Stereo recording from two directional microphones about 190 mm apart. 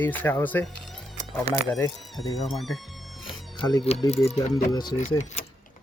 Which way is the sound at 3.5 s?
25° left (ahead or behind).